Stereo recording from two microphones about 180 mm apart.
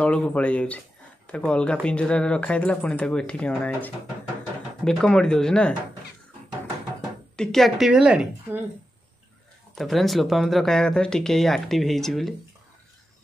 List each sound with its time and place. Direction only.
0.0 s speech: 5° left (ahead or behind)
7.3 s speech: centre (ahead or behind)
9.8 s speech: centre (ahead or behind)